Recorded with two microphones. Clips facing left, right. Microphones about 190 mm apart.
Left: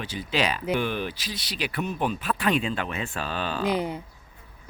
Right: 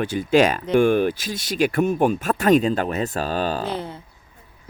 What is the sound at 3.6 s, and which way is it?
Speech, 15° left (ahead or behind).